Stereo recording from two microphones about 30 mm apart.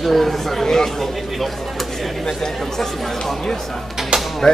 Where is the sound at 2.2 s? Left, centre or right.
Centre.